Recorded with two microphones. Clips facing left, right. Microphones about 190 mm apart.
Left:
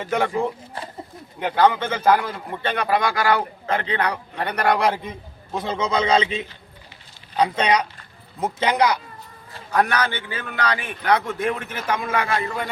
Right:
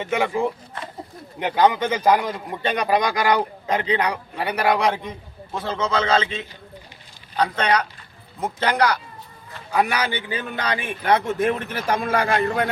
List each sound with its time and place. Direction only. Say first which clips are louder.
0.0 s speech: even; 5° right (ahead or behind)
1.4 s a man's voice: even; 15° right (ahead or behind); by 5.1 s centre (ahead or behind)
5.5 s a man's voice: left 1 dB; 15° left (ahead or behind)
9.7 s a man's voice: left 1 dB; 10° right (ahead or behind); by 12.3 s 40° right (ahead or behind)